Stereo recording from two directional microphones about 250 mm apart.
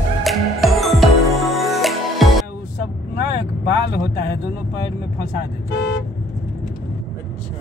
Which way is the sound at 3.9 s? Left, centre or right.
Left.